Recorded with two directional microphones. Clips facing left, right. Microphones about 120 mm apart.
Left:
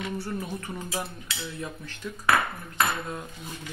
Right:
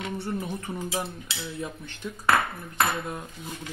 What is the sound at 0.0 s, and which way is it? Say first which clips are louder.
Cutlery: right 1 dB; 20° right (ahead or behind).